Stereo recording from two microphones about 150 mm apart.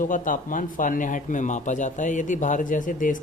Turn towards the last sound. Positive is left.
turn(degrees=60)  # may be behind; listen again after turning